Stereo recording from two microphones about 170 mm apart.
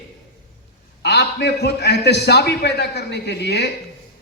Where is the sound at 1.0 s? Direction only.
75° left (ahead or behind).